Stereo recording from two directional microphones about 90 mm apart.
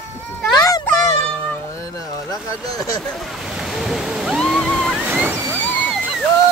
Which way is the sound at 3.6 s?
5° right (ahead or behind).